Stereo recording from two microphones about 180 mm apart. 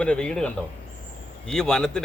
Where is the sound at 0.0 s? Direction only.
5° left (ahead or behind).